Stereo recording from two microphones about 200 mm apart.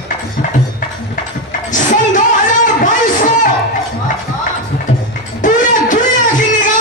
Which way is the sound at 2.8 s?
40° left (ahead or behind).